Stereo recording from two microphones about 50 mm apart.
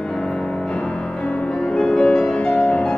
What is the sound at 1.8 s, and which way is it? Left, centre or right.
Music, centre.